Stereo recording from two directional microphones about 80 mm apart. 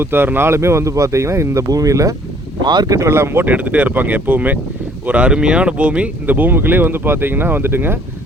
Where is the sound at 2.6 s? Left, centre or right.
Right.